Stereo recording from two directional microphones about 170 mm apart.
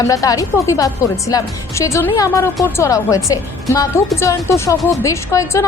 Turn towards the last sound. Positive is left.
turn(degrees=20)  # may be behind; listen again after turning